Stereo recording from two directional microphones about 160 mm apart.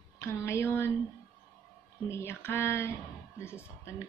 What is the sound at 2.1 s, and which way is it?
A woman's voice, 15° left (ahead or behind).